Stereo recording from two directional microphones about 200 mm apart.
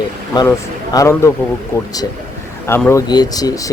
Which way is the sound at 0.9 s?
15° left (ahead or behind).